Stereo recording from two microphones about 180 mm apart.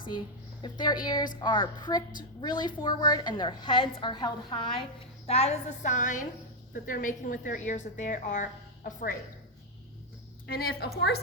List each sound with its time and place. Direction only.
0.6 s a woman's voice: 25° left (ahead or behind); by 9.1 s 50° left (ahead or behind)
10.5 s a woman's voice: 60° left (ahead or behind)